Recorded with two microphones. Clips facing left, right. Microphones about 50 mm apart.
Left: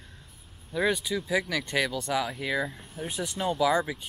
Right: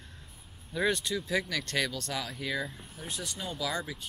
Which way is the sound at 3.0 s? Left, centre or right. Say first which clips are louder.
Left 8 dB; centre.